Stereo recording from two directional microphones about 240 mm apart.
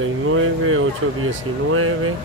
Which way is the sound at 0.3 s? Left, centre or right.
Right.